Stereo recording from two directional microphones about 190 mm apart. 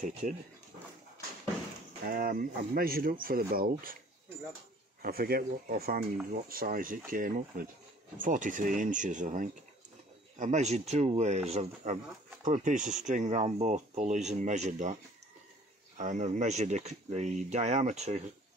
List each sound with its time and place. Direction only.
0.2 s speech: 45° right (ahead or behind)
2.0 s speech: 50° right (ahead or behind)
5.0 s speech: 50° right (ahead or behind)
16.0 s speech: 40° right (ahead or behind)